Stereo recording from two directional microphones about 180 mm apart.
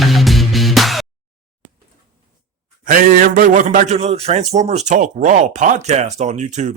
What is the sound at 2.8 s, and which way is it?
A man's voice, 50° right (ahead or behind).